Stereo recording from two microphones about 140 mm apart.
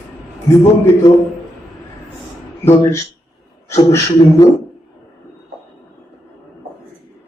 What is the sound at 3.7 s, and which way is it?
Speech, 20° left (ahead or behind).